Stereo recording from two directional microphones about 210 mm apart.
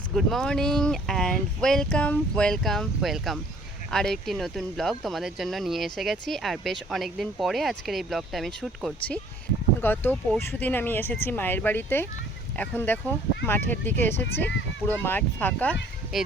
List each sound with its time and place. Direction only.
0.1 s speech: centre (ahead or behind)
14.3 s speech: 50° left (ahead or behind)
14.8 s speech: 10° left (ahead or behind)